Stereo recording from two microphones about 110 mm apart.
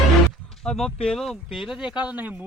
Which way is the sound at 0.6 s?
5° left (ahead or behind).